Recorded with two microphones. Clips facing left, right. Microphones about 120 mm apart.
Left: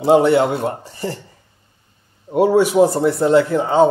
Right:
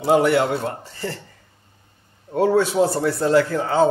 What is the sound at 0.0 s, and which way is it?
A man's voice, 25° left (ahead or behind).